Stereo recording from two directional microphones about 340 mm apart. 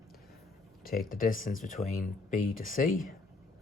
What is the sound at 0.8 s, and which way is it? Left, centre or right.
Speech, left.